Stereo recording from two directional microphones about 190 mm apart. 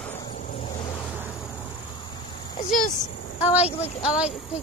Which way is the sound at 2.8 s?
40° left (ahead or behind).